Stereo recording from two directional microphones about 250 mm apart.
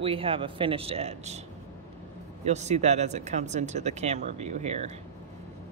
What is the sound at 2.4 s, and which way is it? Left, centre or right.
Speech, right.